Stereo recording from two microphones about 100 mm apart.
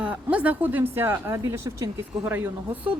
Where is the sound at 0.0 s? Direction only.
15° right (ahead or behind).